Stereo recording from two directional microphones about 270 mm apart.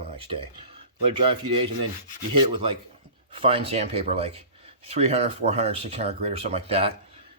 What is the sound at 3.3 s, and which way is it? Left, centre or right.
Speech, right.